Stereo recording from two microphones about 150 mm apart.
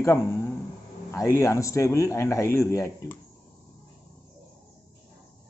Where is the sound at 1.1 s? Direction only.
20° left (ahead or behind).